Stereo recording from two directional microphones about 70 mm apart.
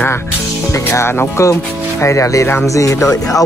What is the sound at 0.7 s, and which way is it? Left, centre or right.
Speech, left.